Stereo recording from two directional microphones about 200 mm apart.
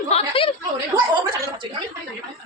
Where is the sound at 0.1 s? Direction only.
30° left (ahead or behind).